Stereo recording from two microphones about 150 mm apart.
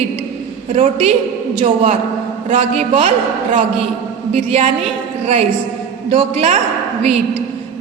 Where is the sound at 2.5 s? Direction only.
40° right (ahead or behind).